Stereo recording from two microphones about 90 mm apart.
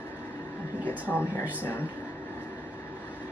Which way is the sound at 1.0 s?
20° right (ahead or behind).